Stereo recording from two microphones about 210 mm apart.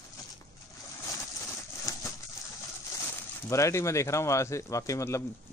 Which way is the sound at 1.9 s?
15° left (ahead or behind).